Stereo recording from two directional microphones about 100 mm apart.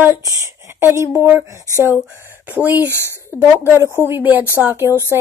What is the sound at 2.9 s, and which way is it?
Speech, 25° left (ahead or behind).